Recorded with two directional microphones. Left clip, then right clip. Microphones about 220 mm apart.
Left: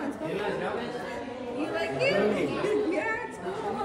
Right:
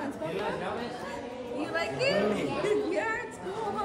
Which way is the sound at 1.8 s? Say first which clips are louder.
Left 1 dB; 20° right (ahead or behind).